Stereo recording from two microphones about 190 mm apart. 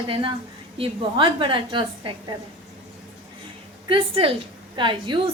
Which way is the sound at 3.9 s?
30° right (ahead or behind).